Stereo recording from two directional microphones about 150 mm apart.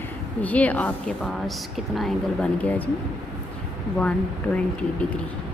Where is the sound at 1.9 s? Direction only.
5° left (ahead or behind).